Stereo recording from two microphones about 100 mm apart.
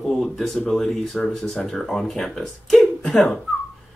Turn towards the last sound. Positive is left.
turn(degrees=5)  # may be behind; listen again after turning